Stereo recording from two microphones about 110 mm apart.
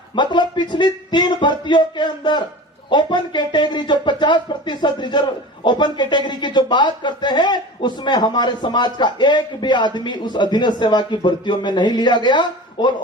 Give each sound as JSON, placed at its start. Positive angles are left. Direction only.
{"t": 0.2, "sound": "speech", "side_deg": 45}